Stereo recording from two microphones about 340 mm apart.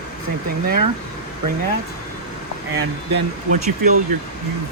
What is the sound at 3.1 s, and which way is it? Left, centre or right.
Speech, right.